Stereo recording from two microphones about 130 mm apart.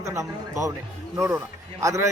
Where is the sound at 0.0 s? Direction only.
25° right (ahead or behind).